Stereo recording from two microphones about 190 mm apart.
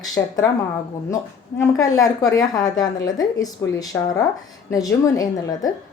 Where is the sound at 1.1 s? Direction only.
15° left (ahead or behind).